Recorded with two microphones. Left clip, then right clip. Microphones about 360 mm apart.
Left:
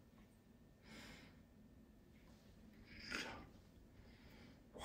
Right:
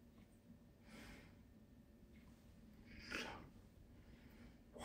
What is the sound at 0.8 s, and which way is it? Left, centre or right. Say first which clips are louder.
Gasp: left 2 dB; centre.